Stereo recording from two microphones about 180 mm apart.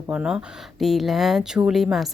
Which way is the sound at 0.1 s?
5° right (ahead or behind).